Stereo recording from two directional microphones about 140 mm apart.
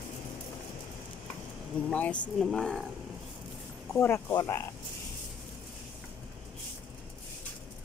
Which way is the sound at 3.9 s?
20° left (ahead or behind).